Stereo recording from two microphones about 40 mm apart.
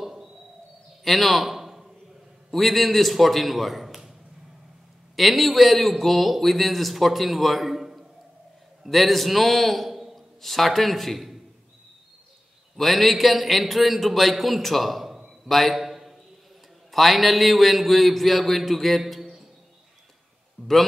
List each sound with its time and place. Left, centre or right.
0.0 s a sound: centre
2.5 s a man's voice: centre
5.1 s a man's voice: centre
12.7 s a man's voice: centre
15.4 s a sound: centre
16.9 s a man's voice: centre
20.6 s a man's voice: left